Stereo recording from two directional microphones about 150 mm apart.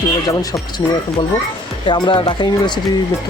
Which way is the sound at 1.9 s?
30° left (ahead or behind).